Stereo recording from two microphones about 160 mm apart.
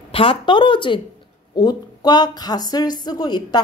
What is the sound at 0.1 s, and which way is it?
A woman's voice, 35° left (ahead or behind).